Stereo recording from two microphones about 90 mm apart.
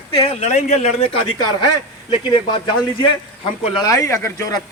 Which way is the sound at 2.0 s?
65° left (ahead or behind).